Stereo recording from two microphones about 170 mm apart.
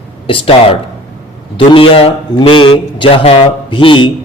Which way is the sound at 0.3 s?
35° left (ahead or behind).